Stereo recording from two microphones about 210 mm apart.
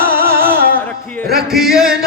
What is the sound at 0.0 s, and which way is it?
Music, 45° right (ahead or behind).